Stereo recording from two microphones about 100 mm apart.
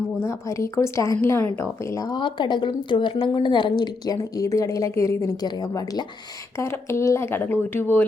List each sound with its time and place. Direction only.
0.2 s speech: 25° left (ahead or behind)
5.4 s speech: 45° left (ahead or behind)
6.6 s speech: 25° left (ahead or behind)